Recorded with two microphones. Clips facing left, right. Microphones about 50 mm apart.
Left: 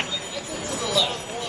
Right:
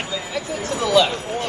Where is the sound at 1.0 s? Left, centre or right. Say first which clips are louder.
Right 8 dB; right.